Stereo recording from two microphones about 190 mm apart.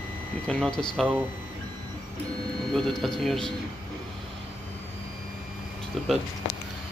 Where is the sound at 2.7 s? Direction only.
Centre (ahead or behind).